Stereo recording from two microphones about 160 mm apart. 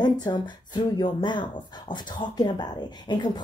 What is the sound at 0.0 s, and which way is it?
Speech, 25° left (ahead or behind).